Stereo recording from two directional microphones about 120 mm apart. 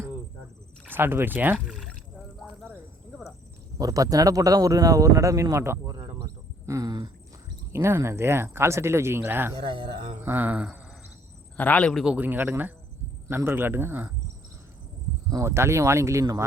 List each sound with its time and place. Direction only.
0.9 s speech: 20° right (ahead or behind)
1.5 s speech: 5° right (ahead or behind)
2.4 s a sound: 5° left (ahead or behind)
3.8 s speech: 30° right (ahead or behind)
6.7 s a sound: 30° right (ahead or behind)
7.7 s speech: 20° right (ahead or behind)
9.6 s speech: 45° right (ahead or behind)
10.2 s speech: 15° right (ahead or behind)
11.5 s a man's voice: 10° left (ahead or behind)
12.0 s speech: 15° right (ahead or behind)
15.3 s speech: 25° right (ahead or behind)